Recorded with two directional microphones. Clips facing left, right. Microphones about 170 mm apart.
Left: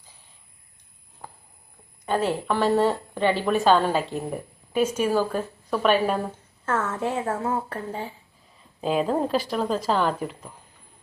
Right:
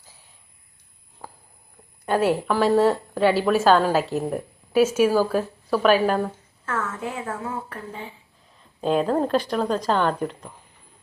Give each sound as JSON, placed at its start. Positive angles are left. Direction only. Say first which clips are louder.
{"t": 1.2, "sound": "a sound", "louder": "right 1 dB", "side_deg": 0}
{"t": 2.0, "sound": "a woman's voice", "louder": "right 3 dB", "side_deg": -10}
{"t": 6.7, "sound": "a woman's voice", "louder": "left 3 dB", "side_deg": 30}
{"t": 8.5, "sound": "a woman's voice", "louder": "right 2 dB", "side_deg": 5}